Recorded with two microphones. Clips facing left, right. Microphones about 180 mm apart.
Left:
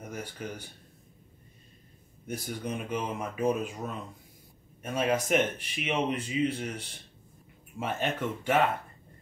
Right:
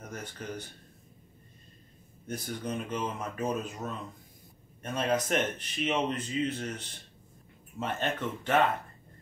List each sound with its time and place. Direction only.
0.0 s speech: 10° left (ahead or behind)
2.2 s speech: 10° left (ahead or behind)